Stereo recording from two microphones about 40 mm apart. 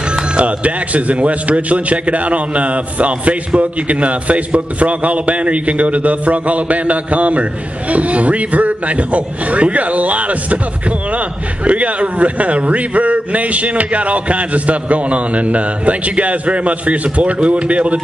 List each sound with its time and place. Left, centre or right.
0.4 s a man's voice: right